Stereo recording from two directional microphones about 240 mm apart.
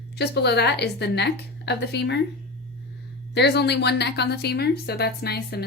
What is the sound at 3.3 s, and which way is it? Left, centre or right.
Speech, left.